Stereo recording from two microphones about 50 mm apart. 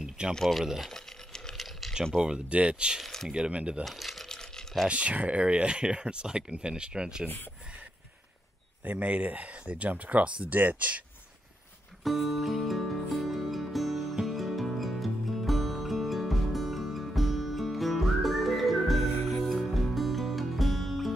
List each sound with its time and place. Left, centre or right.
0.3 s speech: centre
0.8 s a sound: centre
2.1 s speech: centre
3.0 s a sound: centre
3.3 s speech: centre
3.8 s coin: centre
4.3 s a sound: centre
4.8 s speech: right
8.8 s speech: right
12.0 s music: centre